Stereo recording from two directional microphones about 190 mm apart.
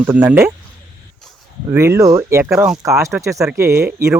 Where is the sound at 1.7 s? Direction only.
15° right (ahead or behind).